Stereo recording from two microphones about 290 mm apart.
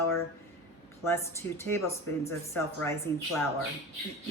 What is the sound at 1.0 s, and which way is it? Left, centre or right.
Speech, centre.